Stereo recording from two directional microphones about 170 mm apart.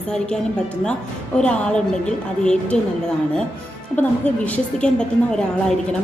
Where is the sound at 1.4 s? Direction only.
5° left (ahead or behind).